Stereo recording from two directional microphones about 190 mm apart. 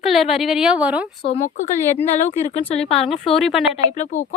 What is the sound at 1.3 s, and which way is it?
Speech, 40° left (ahead or behind).